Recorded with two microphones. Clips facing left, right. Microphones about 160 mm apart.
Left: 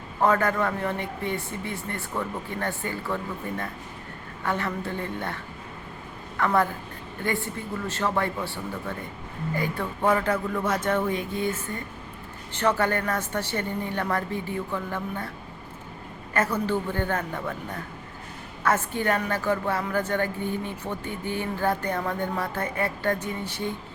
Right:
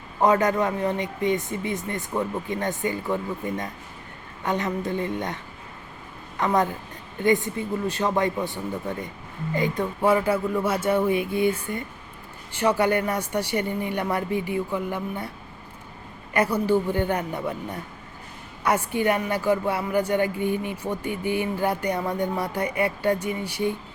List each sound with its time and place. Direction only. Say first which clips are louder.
0.2 s a woman's voice: right 2 dB; 15° right (ahead or behind)
10.0 s speech: right 2 dB; 10° right (ahead or behind)
16.3 s speech: right 4 dB; 15° right (ahead or behind)